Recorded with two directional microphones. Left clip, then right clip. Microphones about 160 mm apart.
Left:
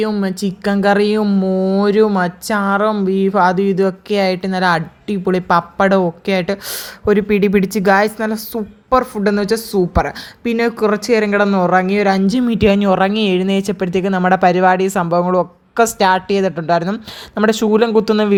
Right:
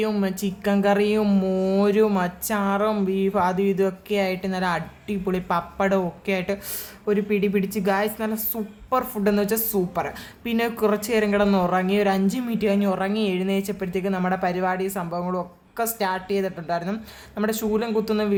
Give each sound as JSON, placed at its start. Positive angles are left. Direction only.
{"t": 0.2, "sound": "speech", "side_deg": 30}
{"t": 1.2, "sound": "speech", "side_deg": 20}